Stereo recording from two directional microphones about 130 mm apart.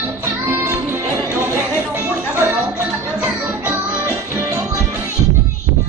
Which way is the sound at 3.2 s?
20° right (ahead or behind).